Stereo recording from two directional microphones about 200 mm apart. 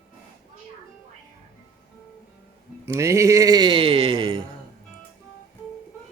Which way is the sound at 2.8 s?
15° right (ahead or behind).